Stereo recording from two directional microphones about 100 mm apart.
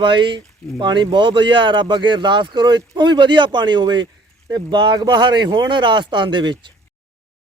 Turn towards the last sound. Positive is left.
turn(degrees=-50)  # may be behind; listen again after turning